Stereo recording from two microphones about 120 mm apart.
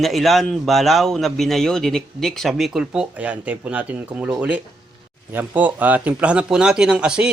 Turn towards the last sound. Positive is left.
turn(degrees=-10)  # may be behind; listen again after turning